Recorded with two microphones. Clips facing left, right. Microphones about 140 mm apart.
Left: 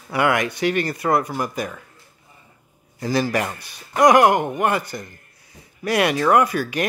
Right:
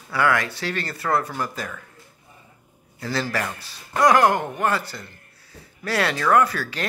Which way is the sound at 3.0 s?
15° left (ahead or behind).